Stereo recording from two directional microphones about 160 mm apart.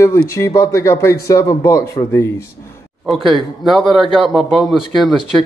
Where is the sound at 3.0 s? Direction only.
Centre (ahead or behind).